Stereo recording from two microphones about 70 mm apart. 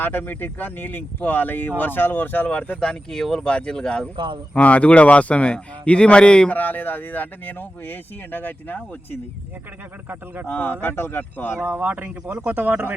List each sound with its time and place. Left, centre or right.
0.0 s speech: left
6.6 s speech: left
10.4 s speech: left
11.6 s speech: right